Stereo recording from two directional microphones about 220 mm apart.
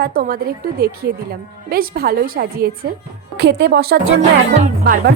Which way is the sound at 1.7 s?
45° right (ahead or behind).